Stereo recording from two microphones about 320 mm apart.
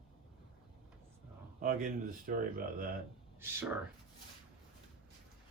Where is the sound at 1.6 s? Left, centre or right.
Right.